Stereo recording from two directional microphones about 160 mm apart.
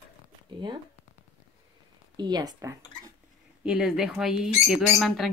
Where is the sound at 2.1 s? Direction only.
25° right (ahead or behind).